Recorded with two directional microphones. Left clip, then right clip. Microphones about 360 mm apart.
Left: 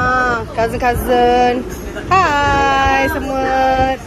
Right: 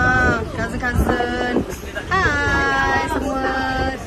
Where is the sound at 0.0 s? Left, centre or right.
Centre.